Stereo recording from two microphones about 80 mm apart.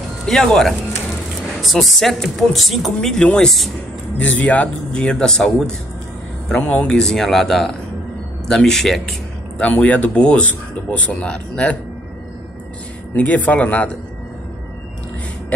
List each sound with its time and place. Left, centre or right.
0.3 s speech: centre
4.2 s speech: centre
6.6 s speech: centre
9.6 s speech: centre
13.1 s speech: centre